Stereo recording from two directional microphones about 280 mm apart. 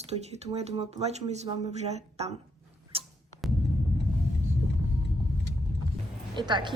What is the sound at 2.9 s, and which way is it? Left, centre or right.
Music, centre.